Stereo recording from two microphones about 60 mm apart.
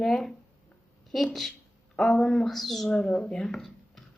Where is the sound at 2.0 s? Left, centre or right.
Centre.